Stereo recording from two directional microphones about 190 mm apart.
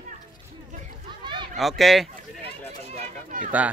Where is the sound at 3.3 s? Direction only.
45° right (ahead or behind).